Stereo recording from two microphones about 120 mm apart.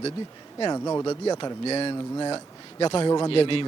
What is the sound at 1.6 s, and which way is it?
Speech, 55° left (ahead or behind).